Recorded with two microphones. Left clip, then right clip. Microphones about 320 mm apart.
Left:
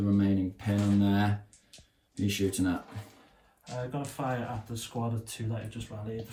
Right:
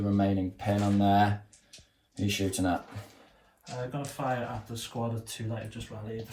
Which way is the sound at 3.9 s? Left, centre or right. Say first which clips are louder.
Right 2 dB; centre.